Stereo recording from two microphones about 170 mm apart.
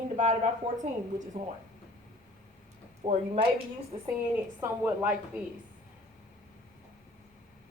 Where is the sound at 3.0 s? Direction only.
35° right (ahead or behind).